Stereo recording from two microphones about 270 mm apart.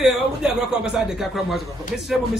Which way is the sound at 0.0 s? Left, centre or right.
Centre.